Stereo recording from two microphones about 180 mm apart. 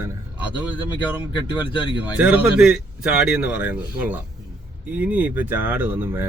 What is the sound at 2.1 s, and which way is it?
Speech, 5° right (ahead or behind).